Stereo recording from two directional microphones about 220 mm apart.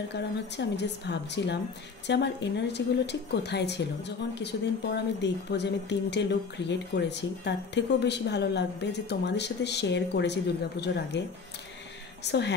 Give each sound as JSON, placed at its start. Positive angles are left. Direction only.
{"t": 0.1, "sound": "speech", "side_deg": 50}
{"t": 12.3, "sound": "speech", "side_deg": 50}